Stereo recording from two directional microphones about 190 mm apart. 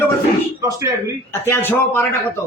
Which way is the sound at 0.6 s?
15° right (ahead or behind).